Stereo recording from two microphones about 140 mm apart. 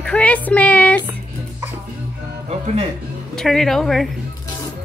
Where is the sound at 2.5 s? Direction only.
50° right (ahead or behind).